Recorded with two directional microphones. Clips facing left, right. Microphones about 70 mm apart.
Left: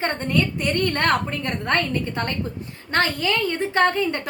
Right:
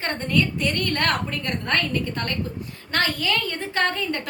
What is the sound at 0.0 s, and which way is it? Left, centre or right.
A woman's voice, left.